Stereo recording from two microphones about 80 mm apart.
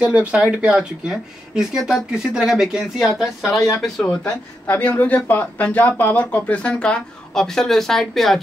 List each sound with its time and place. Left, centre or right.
0.0 s speech: centre
3.4 s speech: left
4.0 s speech: centre